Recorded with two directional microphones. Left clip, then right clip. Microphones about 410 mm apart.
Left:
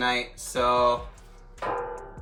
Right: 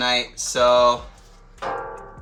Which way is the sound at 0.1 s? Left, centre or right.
Centre.